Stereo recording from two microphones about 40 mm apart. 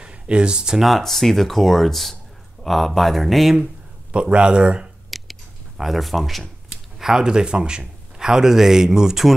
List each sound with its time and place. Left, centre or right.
0.0 s speech: right
0.7 s speech: centre
4.1 s speech: right
5.1 s a sound: centre
6.7 s a man's voice: centre